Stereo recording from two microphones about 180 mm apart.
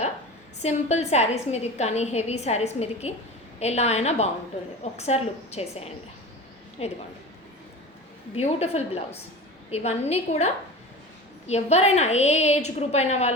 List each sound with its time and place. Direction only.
0.6 s a woman's voice: 40° left (ahead or behind)
8.4 s a woman's voice: 35° left (ahead or behind)